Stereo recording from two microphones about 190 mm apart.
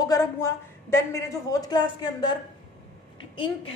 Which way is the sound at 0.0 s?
20° left (ahead or behind).